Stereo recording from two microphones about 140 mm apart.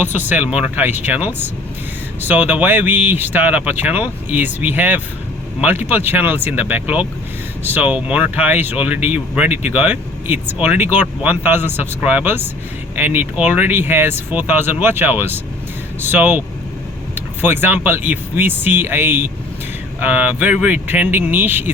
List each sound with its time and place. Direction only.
0.0 s speech: 15° right (ahead or behind)